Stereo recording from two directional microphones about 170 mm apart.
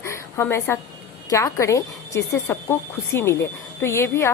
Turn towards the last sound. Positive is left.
turn(degrees=15)  # may be behind; listen again after turning